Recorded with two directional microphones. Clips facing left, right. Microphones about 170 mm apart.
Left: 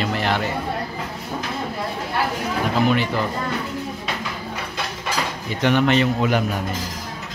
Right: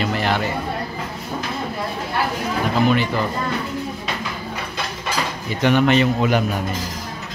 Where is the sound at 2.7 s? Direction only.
Centre (ahead or behind).